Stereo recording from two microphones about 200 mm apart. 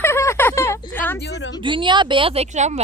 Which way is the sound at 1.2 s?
60° left (ahead or behind).